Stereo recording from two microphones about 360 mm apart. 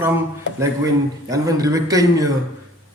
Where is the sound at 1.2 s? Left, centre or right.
Centre.